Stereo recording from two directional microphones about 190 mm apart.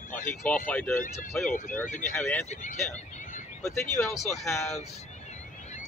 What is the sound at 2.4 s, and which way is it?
Speech, 35° left (ahead or behind).